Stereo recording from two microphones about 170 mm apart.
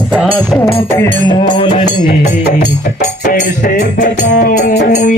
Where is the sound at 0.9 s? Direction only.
20° left (ahead or behind).